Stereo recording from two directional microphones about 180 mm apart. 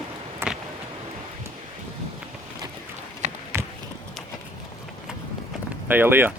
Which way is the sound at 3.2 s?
40° right (ahead or behind).